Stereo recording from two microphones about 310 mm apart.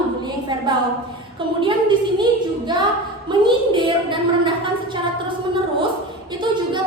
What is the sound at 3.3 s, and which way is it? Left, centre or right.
A woman's voice, centre.